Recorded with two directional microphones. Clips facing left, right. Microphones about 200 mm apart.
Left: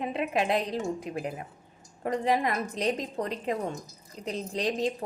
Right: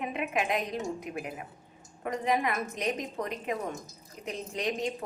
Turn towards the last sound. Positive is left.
turn(degrees=35)  # may be behind; listen again after turning